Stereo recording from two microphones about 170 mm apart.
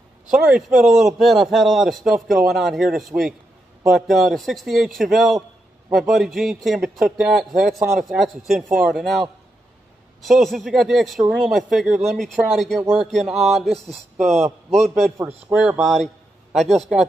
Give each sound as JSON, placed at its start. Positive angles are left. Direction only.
{"t": 0.3, "sound": "a man's voice", "side_deg": -5}
{"t": 10.2, "sound": "a man's voice", "side_deg": 0}
{"t": 13.8, "sound": "a man's voice", "side_deg": -40}
{"t": 15.5, "sound": "a man's voice", "side_deg": -5}